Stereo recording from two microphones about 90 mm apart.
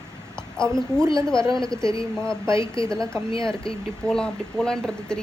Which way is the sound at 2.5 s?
35° right (ahead or behind).